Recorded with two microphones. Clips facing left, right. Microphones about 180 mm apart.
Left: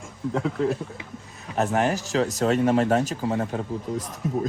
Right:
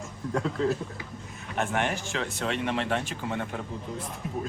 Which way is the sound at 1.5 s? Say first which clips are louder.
Left 6 dB; 35° left (ahead or behind).